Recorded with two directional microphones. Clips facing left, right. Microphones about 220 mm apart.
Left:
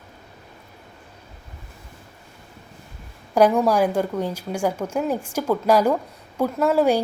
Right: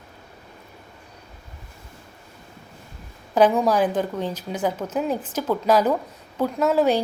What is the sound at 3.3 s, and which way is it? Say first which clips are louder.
A woman's voice: left 1 dB; 10° left (ahead or behind).